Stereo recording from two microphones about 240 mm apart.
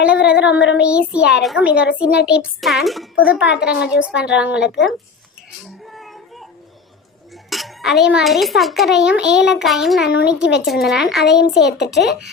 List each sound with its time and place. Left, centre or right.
0.0 s a child's voice: centre
4.6 s a child's voice: left
5.8 s a sound: centre
7.5 s a child's voice: centre
11.3 s a child's voice: left